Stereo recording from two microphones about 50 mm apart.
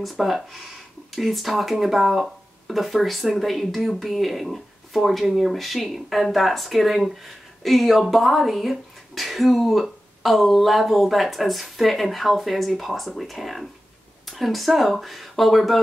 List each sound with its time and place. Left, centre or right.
0.0 s speech: centre